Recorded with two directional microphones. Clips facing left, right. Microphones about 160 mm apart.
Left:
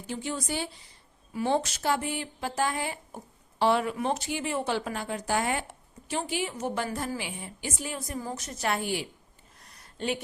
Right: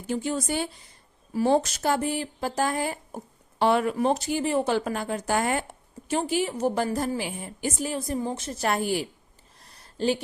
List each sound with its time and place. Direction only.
0.1 s speech: 45° right (ahead or behind)
1.3 s a woman's voice: 40° right (ahead or behind)
3.9 s a woman's voice: 35° right (ahead or behind)
7.9 s a woman's voice: 30° right (ahead or behind)
9.6 s a sound: 30° right (ahead or behind)